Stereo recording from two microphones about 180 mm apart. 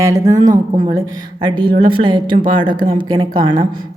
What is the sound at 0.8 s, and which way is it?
A woman's voice, 20° right (ahead or behind).